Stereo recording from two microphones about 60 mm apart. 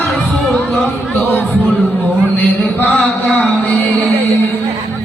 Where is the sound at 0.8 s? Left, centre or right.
Left.